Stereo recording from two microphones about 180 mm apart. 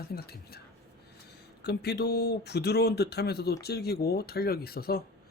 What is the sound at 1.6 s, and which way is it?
Speech, 65° left (ahead or behind).